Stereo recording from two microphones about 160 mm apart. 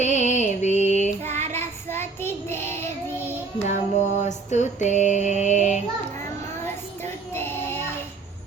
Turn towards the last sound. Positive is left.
turn(degrees=15)  # may be behind; listen again after turning